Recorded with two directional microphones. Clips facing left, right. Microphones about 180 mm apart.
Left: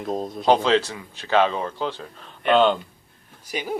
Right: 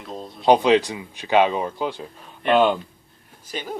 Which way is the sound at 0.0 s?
45° left (ahead or behind).